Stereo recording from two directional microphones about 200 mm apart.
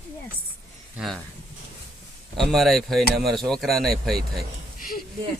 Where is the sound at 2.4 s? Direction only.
Centre (ahead or behind).